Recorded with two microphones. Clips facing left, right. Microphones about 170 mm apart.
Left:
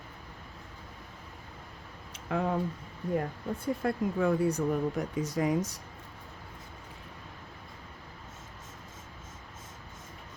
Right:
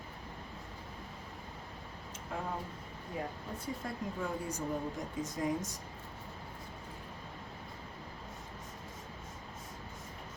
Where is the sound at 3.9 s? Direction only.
65° left (ahead or behind).